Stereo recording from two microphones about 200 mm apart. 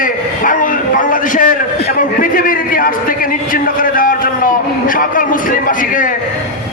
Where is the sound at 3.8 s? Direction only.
45° left (ahead or behind).